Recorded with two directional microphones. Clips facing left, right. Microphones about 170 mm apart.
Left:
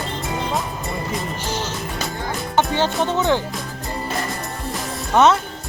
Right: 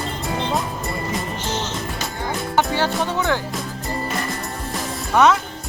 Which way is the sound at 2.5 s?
20° left (ahead or behind).